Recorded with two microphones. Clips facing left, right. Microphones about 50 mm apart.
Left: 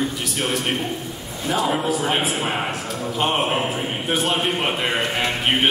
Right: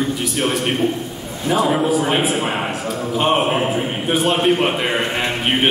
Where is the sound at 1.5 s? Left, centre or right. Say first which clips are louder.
Right 5 dB; centre.